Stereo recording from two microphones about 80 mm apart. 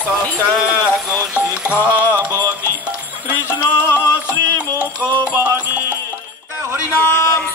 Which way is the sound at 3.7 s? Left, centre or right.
Left.